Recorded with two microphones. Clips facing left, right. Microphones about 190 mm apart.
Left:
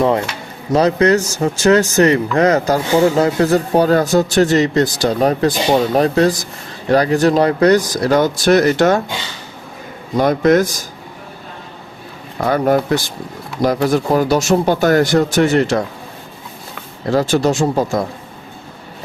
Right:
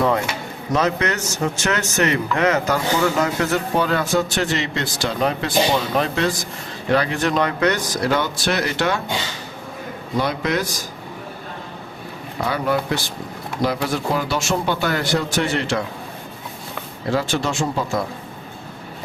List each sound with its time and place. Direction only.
0.7 s speech: 35° left (ahead or behind)
10.2 s speech: 45° left (ahead or behind)
12.5 s speech: 45° left (ahead or behind)
17.1 s speech: 40° left (ahead or behind)